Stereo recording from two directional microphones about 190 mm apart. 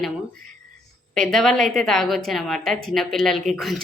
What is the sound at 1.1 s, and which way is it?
A woman's voice, centre (ahead or behind).